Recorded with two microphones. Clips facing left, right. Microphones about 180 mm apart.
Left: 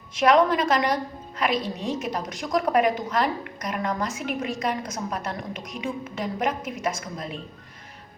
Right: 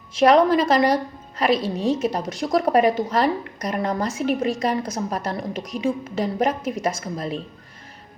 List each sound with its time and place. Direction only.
0.2 s speech: 35° right (ahead or behind)